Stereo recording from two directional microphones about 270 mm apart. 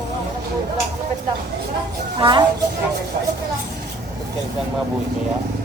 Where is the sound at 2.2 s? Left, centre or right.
Centre.